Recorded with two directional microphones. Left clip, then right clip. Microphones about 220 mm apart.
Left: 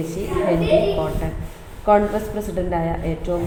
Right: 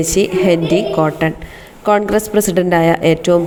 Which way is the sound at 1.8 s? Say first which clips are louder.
Right 3 dB; 40° right (ahead or behind).